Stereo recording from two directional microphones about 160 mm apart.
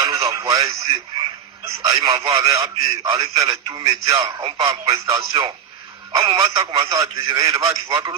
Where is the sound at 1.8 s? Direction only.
20° right (ahead or behind).